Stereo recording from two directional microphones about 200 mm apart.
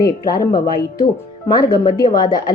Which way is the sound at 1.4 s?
20° left (ahead or behind).